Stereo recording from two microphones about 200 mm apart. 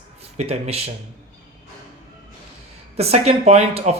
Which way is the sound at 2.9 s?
30° right (ahead or behind).